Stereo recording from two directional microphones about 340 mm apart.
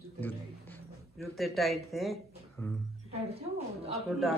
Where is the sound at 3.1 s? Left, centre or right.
Centre.